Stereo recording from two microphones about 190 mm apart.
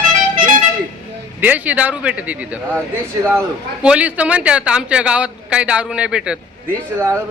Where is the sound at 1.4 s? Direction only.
10° right (ahead or behind).